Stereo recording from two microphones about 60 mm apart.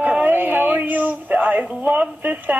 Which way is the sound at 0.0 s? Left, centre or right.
Right.